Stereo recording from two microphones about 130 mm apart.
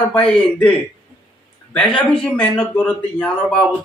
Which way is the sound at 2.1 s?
5° left (ahead or behind).